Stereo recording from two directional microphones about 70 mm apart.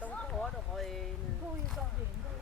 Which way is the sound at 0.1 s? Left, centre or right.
Centre.